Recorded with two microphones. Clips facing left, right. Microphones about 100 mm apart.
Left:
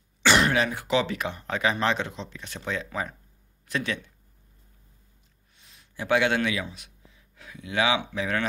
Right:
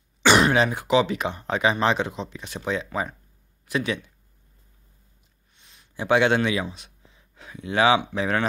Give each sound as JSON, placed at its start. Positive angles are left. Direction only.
{"t": 0.2, "sound": "speech", "side_deg": -20}
{"t": 5.6, "sound": "a sound", "side_deg": 0}
{"t": 5.9, "sound": "a man's voice", "side_deg": -25}